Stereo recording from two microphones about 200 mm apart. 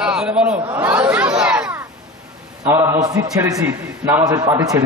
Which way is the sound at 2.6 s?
15° right (ahead or behind).